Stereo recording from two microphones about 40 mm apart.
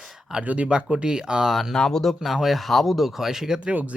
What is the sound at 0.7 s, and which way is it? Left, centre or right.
Speech, right.